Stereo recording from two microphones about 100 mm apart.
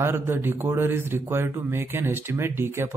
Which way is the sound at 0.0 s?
25° right (ahead or behind).